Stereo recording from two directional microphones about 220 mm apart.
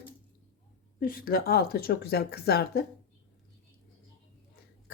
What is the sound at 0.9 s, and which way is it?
Speech, 40° left (ahead or behind).